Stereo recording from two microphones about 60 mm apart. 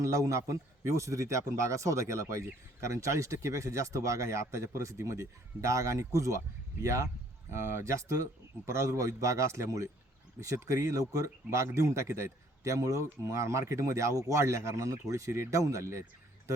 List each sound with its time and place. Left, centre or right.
0.0 s a man's voice: right